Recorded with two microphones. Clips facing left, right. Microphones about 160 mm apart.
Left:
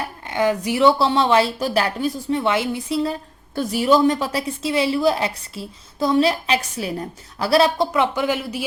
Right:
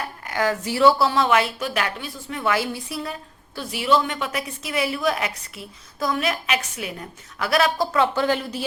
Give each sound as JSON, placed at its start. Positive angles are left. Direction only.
{"t": 0.0, "sound": "speech", "side_deg": 25}
{"t": 2.4, "sound": "speech", "side_deg": 25}
{"t": 3.5, "sound": "a woman's voice", "side_deg": 45}
{"t": 7.9, "sound": "speech", "side_deg": 15}